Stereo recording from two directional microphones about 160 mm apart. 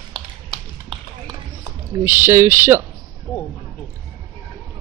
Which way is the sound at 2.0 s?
15° right (ahead or behind).